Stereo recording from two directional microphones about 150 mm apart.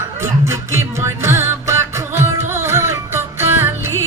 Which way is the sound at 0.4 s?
20° right (ahead or behind).